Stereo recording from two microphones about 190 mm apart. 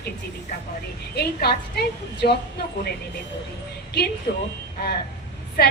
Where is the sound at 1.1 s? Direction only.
55° left (ahead or behind).